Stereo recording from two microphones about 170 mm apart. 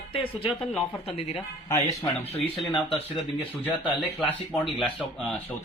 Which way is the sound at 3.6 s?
10° right (ahead or behind).